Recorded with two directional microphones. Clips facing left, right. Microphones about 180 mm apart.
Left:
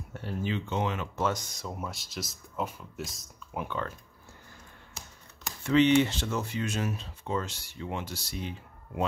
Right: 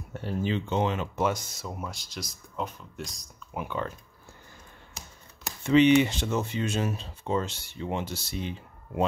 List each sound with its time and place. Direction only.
0.1 s speech: 30° right (ahead or behind)
1.1 s speech: 10° right (ahead or behind)
3.6 s speech: 10° right (ahead or behind)
5.6 s speech: 20° right (ahead or behind)